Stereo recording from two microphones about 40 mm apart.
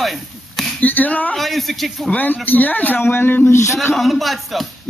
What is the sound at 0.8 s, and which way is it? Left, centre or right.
Speech, left.